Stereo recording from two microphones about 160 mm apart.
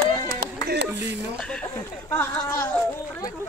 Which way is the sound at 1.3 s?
10° left (ahead or behind).